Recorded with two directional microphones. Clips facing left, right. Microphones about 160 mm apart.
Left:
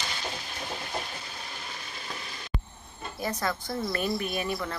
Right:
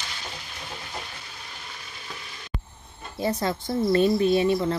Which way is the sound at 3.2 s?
25° right (ahead or behind).